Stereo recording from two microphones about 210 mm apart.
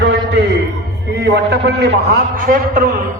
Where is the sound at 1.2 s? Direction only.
55° right (ahead or behind).